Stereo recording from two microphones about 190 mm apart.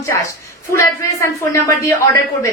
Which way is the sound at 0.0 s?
15° left (ahead or behind).